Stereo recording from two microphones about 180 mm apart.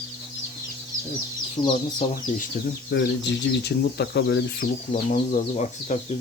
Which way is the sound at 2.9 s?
75° left (ahead or behind).